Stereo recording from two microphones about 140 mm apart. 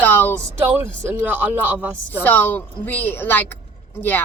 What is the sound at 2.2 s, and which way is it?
Speech, 15° left (ahead or behind).